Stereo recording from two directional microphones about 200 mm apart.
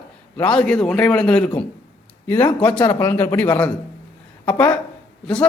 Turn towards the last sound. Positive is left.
turn(degrees=5)  # may be behind; listen again after turning